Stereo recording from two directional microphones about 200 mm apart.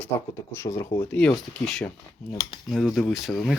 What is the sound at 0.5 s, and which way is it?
Speech, 15° left (ahead or behind).